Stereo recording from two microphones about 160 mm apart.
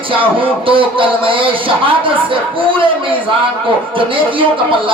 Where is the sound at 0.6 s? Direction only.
35° right (ahead or behind).